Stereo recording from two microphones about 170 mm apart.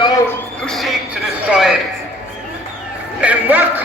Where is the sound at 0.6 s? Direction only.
Centre (ahead or behind).